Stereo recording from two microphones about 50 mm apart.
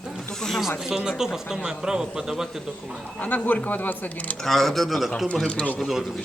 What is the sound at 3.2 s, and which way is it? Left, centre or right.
Speech, left.